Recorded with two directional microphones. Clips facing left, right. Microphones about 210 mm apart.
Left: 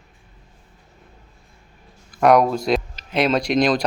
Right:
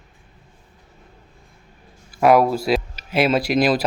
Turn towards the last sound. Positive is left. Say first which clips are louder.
# even
turn(degrees=-5)  # may be behind; listen again after turning